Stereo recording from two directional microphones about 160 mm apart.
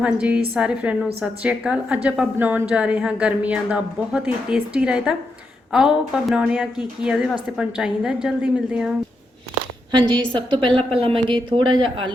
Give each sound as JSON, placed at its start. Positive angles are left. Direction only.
{"t": 0.0, "sound": "a woman's voice", "side_deg": -10}
{"t": 9.9, "sound": "a woman's voice", "side_deg": -30}